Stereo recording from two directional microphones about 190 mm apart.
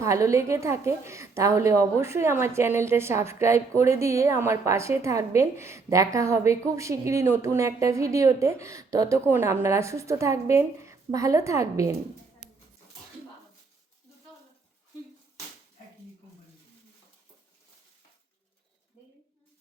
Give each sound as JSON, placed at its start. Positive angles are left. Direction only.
{"t": 0.0, "sound": "a woman's voice", "side_deg": -15}
{"t": 12.4, "sound": "dog", "side_deg": -5}